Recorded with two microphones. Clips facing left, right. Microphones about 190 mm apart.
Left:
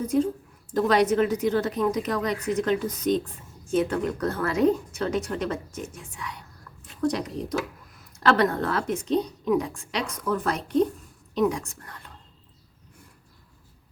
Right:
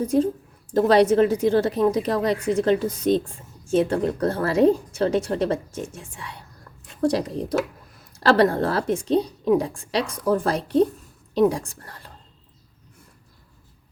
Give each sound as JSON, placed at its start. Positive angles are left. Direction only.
{"t": 0.0, "sound": "a woman's voice", "side_deg": -30}